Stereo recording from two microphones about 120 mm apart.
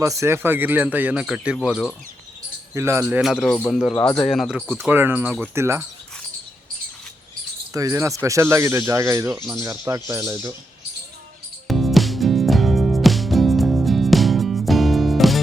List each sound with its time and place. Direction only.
0.0 s speech: 25° right (ahead or behind); by 1.9 s centre (ahead or behind)
2.7 s speech: 25° right (ahead or behind)
3.7 s speech: centre (ahead or behind)
4.7 s speech: 15° right (ahead or behind)
7.7 s speech: 25° right (ahead or behind)
11.7 s music: centre (ahead or behind)